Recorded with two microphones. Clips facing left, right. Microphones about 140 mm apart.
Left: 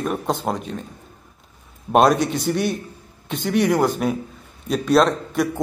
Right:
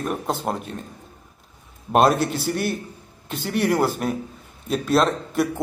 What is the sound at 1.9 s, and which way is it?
Speech, centre (ahead or behind).